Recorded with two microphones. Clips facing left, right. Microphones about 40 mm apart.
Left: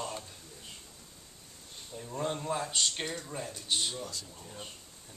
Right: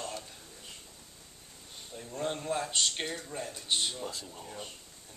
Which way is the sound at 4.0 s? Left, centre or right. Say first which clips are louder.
Right 2 dB; right.